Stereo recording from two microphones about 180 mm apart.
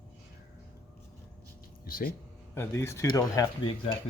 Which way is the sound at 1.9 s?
55° left (ahead or behind).